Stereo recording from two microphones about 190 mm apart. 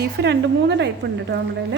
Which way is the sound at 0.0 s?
60° right (ahead or behind).